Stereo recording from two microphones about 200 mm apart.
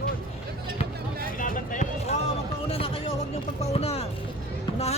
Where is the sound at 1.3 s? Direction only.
40° left (ahead or behind).